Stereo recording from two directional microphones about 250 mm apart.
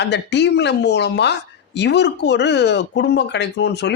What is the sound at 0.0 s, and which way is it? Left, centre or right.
Speech, left.